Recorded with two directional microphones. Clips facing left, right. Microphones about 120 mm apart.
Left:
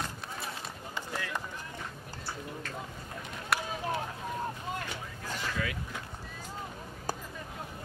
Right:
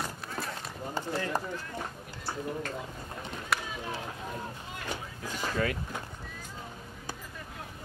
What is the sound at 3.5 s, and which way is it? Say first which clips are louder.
Run: left 1 dB; centre (ahead or behind).